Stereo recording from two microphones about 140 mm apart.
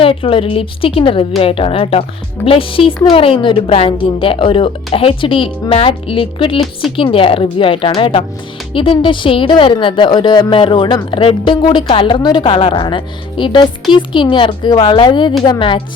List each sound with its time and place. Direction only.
0.0 s speech: 40° left (ahead or behind)